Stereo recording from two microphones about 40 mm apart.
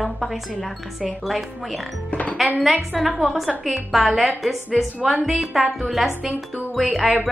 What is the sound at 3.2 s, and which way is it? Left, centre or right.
A woman's voice, centre.